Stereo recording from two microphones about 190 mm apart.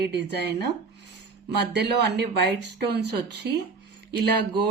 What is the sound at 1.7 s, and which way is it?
Speech, 60° right (ahead or behind).